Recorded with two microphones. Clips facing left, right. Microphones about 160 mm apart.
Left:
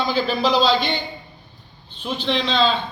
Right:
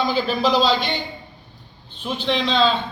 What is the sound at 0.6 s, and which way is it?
Speech, 45° right (ahead or behind).